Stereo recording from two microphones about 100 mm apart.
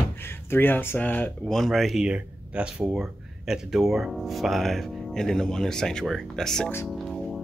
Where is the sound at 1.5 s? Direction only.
Centre (ahead or behind).